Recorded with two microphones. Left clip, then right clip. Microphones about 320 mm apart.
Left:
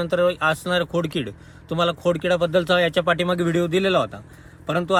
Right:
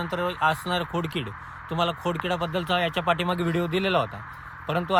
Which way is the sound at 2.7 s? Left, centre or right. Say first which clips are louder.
Left 5 dB; right.